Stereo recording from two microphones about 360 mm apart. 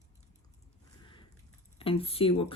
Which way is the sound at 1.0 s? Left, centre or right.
Centre.